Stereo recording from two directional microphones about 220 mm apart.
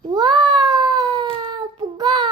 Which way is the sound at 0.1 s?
20° right (ahead or behind).